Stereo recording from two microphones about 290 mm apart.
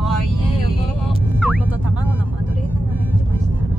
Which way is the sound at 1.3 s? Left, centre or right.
Centre.